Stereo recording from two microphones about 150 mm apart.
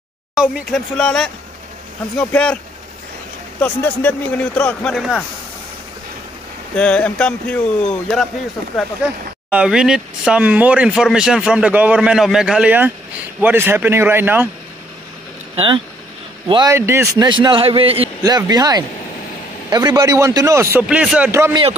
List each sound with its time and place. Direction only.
0.3 s speech: centre (ahead or behind)
3.6 s speech: 10° left (ahead or behind)
6.7 s speech: 10° left (ahead or behind)
9.5 s speech: 5° right (ahead or behind)
15.5 s a man's voice: 35° right (ahead or behind)
16.7 s speech: 15° right (ahead or behind)
17.2 s a man's voice: 30° right (ahead or behind)
18.2 s a man's voice: 25° right (ahead or behind)
20.9 s speech: 5° right (ahead or behind)
21.3 s speech: 15° right (ahead or behind)